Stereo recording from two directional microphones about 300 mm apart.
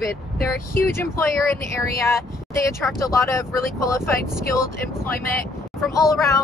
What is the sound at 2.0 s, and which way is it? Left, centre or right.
Speech, centre.